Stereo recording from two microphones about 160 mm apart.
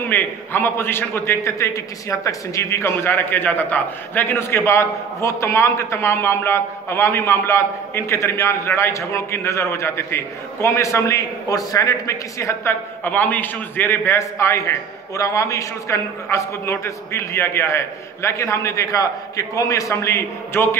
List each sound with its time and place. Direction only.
0.1 s a man's voice: 15° left (ahead or behind)